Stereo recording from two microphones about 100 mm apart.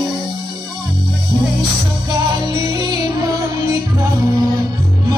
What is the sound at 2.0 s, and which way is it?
Music, 45° right (ahead or behind).